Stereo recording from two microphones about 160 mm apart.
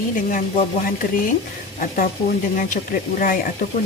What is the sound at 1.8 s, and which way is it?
A woman's voice, 60° left (ahead or behind).